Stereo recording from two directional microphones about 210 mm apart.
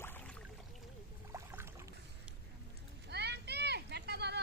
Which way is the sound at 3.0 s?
50° right (ahead or behind).